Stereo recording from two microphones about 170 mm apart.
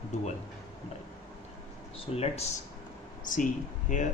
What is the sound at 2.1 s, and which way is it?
Speech, 35° left (ahead or behind).